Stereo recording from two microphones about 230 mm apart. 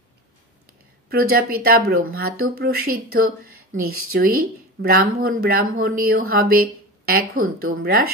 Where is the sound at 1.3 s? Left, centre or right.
Right.